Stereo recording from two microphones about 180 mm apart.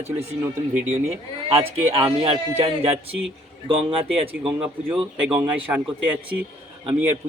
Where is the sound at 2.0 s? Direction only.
35° right (ahead or behind).